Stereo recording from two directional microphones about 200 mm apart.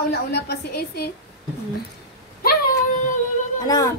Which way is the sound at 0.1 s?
55° left (ahead or behind).